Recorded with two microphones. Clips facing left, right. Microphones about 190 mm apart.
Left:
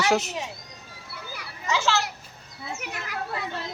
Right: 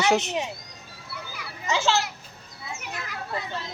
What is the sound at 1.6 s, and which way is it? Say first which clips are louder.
Children playing: right 1 dB; 25° right (ahead or behind).